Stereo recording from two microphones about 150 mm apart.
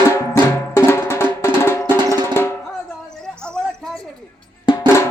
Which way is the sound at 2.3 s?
15° left (ahead or behind).